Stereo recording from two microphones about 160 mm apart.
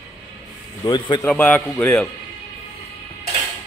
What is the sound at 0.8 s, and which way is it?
Speech, 25° left (ahead or behind).